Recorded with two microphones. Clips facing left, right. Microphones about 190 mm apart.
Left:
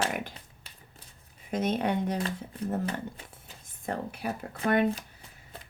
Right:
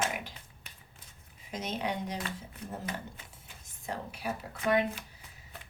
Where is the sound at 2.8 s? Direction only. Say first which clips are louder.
Left 6 dB; 30° left (ahead or behind).